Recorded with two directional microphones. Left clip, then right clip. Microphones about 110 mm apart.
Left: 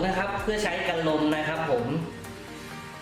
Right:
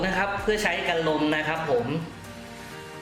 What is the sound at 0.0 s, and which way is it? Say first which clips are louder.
Speech: right 2 dB; 30° right (ahead or behind).